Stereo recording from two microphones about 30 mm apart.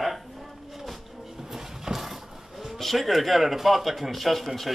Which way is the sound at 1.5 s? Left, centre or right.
Centre.